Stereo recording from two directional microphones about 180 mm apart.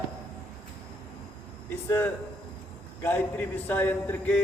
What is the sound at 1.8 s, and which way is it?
A man's voice, 10° left (ahead or behind).